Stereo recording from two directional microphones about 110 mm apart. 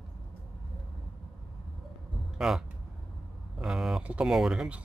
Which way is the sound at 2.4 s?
5° right (ahead or behind).